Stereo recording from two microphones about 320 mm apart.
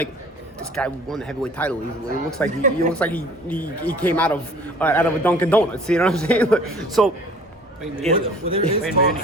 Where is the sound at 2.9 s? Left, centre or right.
Centre.